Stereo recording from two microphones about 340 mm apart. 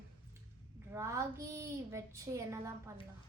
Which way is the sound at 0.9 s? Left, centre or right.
Centre.